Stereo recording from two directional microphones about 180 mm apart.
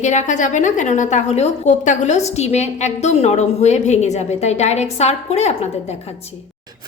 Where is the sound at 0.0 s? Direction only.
40° left (ahead or behind).